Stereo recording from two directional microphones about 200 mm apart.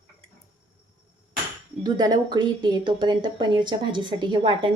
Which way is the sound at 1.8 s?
20° right (ahead or behind).